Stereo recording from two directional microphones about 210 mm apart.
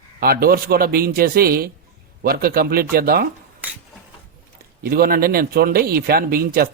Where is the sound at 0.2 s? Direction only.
45° right (ahead or behind).